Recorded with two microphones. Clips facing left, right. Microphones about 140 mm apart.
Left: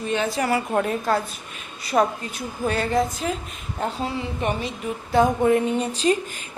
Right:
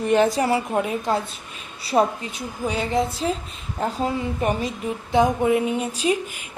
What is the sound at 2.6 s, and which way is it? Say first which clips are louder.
Speech: left 1 dB; 15° right (ahead or behind).